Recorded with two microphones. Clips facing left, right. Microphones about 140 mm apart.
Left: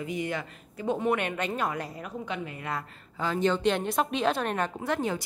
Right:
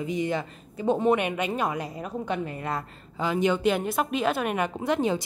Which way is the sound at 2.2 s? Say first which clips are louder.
Right 5 dB; 40° right (ahead or behind).